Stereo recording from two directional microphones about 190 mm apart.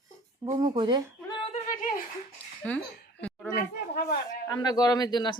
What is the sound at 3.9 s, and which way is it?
Speech, 55° left (ahead or behind).